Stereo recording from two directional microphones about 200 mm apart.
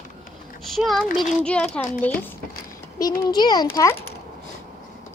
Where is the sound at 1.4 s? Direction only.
5° left (ahead or behind).